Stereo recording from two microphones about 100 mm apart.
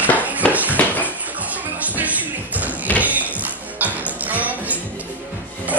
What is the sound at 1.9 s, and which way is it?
Music, 15° right (ahead or behind).